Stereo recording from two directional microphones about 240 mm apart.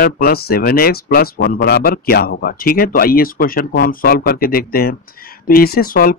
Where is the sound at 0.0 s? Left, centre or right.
Left.